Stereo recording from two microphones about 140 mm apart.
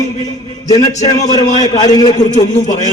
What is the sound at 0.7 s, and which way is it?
A man's voice, 25° left (ahead or behind).